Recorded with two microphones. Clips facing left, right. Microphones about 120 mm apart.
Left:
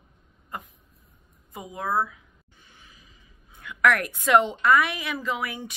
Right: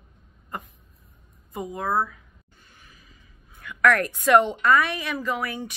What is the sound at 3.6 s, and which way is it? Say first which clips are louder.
A woman's voice: right 2 dB; 15° left (ahead or behind).